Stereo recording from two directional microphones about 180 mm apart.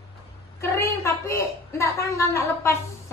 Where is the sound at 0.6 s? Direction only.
15° left (ahead or behind).